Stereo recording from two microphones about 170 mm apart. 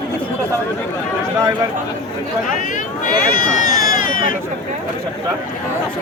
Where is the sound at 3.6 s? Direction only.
50° left (ahead or behind).